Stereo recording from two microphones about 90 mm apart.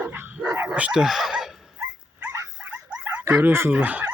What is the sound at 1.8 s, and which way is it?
Dog, 25° right (ahead or behind).